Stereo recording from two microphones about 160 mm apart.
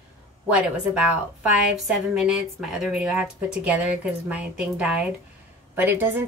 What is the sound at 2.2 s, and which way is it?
A woman's voice, 5° right (ahead or behind).